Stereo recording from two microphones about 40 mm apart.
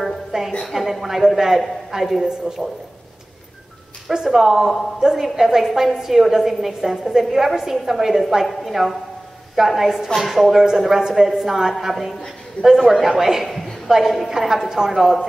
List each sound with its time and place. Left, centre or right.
0.3 s music: centre
0.7 s a woman's voice: centre
4.1 s a woman's voice: centre